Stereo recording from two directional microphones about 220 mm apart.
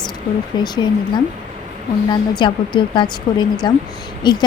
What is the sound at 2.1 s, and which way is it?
A woman's voice, 20° left (ahead or behind).